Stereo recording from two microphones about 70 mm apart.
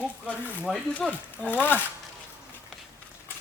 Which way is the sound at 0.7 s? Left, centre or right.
Centre.